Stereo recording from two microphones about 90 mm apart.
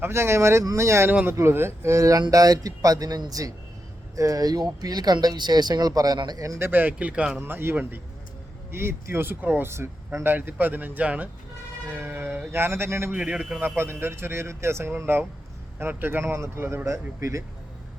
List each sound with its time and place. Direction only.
0.0 s speech: 30° right (ahead or behind)
6.6 s speech: 20° right (ahead or behind)
13.1 s speech: 15° right (ahead or behind)
13.6 s speech: 25° right (ahead or behind)